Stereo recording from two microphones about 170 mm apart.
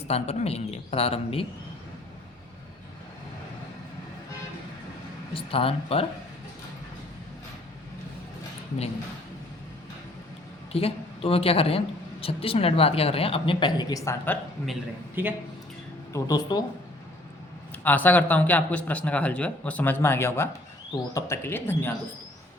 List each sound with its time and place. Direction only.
0.1 s a woman's voice: 35° left (ahead or behind)
5.3 s a woman's voice: 30° left (ahead or behind)
10.7 s a woman's voice: 35° left (ahead or behind); by 14.3 s 15° left (ahead or behind)
15.1 s speech: 10° right (ahead or behind)
16.1 s speech: 20° left (ahead or behind)
17.8 s a man's voice: 10° left (ahead or behind)